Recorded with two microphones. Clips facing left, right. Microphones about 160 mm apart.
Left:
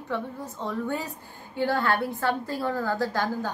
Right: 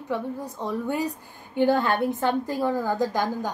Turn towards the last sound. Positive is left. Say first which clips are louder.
# right 2 dB
turn(degrees=-15)  # may be behind; listen again after turning